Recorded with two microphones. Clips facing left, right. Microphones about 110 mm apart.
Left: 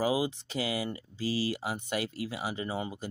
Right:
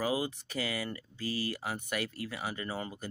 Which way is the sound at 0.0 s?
25° left (ahead or behind).